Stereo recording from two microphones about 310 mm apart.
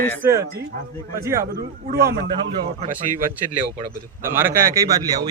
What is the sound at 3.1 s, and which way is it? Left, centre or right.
Speech, right.